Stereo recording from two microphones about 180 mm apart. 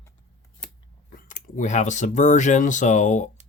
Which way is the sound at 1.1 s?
45° left (ahead or behind).